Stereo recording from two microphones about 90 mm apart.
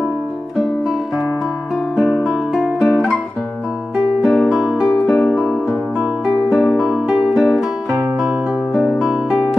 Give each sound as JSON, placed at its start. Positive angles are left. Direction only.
{"t": 2.0, "sound": "music", "side_deg": 5}
{"t": 4.2, "sound": "music", "side_deg": 0}
{"t": 8.7, "sound": "music", "side_deg": 0}